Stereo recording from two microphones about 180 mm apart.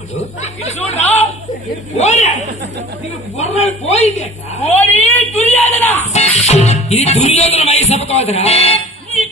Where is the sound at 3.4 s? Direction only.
35° left (ahead or behind).